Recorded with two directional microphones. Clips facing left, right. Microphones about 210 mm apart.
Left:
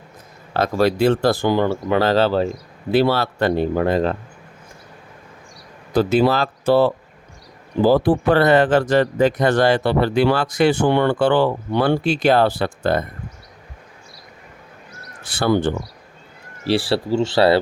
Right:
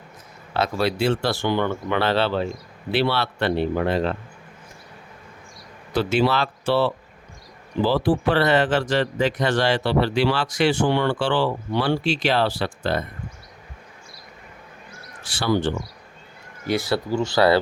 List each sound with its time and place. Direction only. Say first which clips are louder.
0.5 s speech: left 5 dB; 45° left (ahead or behind)
6.0 s speech: left 4 dB; 40° left (ahead or behind)
15.4 s speech: left 4 dB; 55° left (ahead or behind)
16.6 s speech: left 4 dB; 30° left (ahead or behind)